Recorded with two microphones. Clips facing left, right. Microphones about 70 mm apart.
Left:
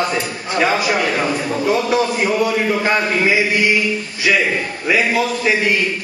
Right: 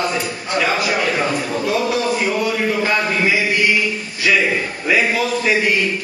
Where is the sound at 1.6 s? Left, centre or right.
Left.